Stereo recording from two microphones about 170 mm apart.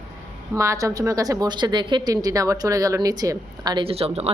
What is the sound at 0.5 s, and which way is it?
A woman's voice, 20° right (ahead or behind).